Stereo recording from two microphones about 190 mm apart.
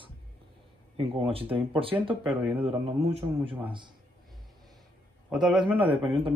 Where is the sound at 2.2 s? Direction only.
5° right (ahead or behind).